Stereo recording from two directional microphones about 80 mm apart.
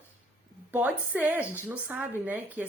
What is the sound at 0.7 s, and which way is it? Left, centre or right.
Speech, right.